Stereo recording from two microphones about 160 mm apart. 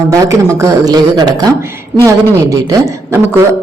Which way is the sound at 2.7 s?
20° right (ahead or behind).